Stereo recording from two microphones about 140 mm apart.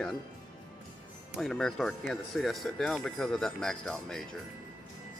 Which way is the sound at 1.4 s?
5° left (ahead or behind).